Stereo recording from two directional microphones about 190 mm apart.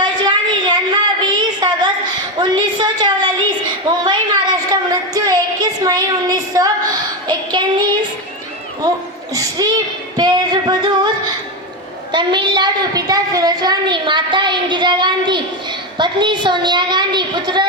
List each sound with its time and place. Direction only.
0.0 s a sound: 25° right (ahead or behind)
4.7 s a woman's voice: 20° right (ahead or behind)
7.3 s child singing: 25° right (ahead or behind)
9.3 s a woman's voice: 20° right (ahead or behind)
10.2 s female singing: 20° right (ahead or behind)
12.1 s a woman's voice: 25° right (ahead or behind)